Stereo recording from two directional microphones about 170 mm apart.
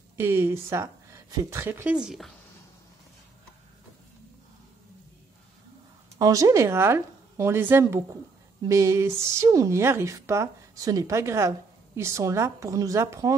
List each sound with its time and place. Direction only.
0.2 s a woman's voice: 15° right (ahead or behind)
2.0 s speech: centre (ahead or behind)
6.1 s speech: 20° right (ahead or behind)